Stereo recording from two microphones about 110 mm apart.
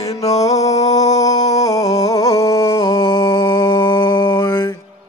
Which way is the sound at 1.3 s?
90° left.